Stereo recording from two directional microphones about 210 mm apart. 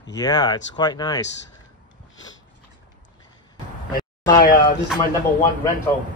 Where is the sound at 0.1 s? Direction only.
20° left (ahead or behind).